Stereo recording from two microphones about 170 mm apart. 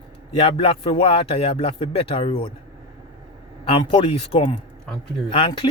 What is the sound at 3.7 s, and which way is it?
A man's voice, 30° left (ahead or behind).